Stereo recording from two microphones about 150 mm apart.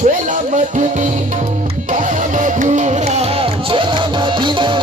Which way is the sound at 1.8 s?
55° right (ahead or behind).